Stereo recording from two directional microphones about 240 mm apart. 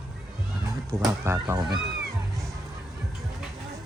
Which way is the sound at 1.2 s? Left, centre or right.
Centre.